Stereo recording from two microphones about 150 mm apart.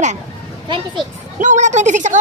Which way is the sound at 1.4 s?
55° right (ahead or behind).